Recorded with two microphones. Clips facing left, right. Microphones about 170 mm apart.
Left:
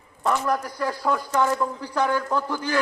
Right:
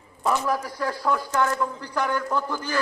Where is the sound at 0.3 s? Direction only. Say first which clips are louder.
Left 1 dB; centre (ahead or behind).